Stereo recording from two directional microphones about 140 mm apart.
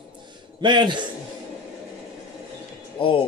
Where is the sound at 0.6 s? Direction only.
35° right (ahead or behind).